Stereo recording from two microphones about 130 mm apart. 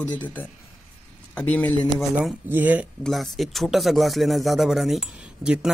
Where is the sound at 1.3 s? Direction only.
10° left (ahead or behind).